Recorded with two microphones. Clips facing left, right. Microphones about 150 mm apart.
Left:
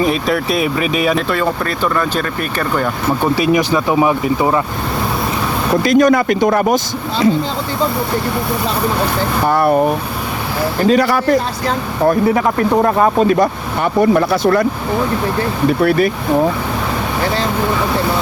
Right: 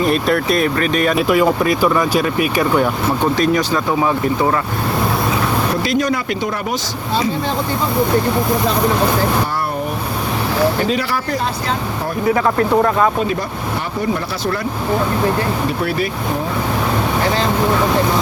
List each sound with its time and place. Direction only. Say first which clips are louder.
0.0 s speech: even; centre (ahead or behind)
1.3 s speech: right 4 dB; 10° right (ahead or behind)
3.3 s speech: left 2 dB; 10° left (ahead or behind)
5.8 s speech: left 7 dB; 50° left (ahead or behind)
9.5 s speech: left 9 dB; 60° left (ahead or behind)
10.8 s speech: left 7 dB; 45° left (ahead or behind)
12.7 s speech: left 2 dB; 25° left (ahead or behind)
14.2 s speech: left 9 dB; 60° left (ahead or behind)
15.8 s speech: left 10 dB; 55° left (ahead or behind)